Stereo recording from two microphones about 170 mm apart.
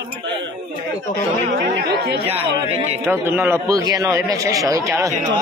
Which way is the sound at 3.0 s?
10° right (ahead or behind).